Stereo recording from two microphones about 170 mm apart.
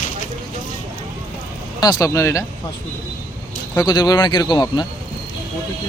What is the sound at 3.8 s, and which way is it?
Speech, 25° left (ahead or behind).